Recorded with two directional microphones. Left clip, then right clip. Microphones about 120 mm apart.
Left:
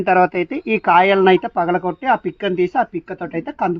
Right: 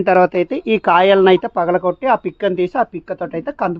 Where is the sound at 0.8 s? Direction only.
90° right.